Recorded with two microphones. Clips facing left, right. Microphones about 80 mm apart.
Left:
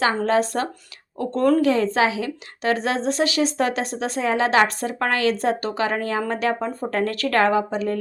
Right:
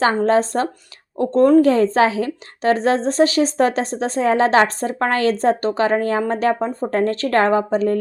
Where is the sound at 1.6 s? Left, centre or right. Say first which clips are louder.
Right 4 dB; right.